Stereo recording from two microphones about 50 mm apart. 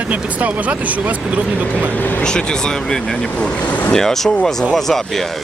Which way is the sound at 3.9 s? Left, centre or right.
Centre.